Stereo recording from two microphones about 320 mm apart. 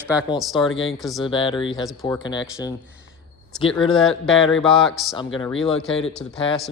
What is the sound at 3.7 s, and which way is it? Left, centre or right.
A man's voice, centre.